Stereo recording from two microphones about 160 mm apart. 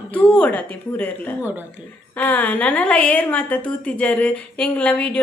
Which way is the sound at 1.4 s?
10° right (ahead or behind).